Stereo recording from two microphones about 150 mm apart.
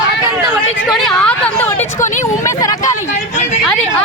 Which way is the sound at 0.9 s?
Centre (ahead or behind).